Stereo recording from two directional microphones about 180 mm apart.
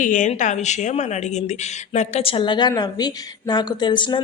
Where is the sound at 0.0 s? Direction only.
45° left (ahead or behind).